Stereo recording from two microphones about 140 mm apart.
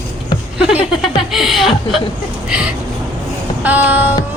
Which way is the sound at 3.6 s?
10° right (ahead or behind).